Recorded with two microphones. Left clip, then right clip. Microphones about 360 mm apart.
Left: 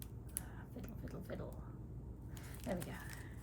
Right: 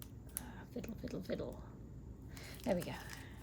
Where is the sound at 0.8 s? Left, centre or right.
Centre.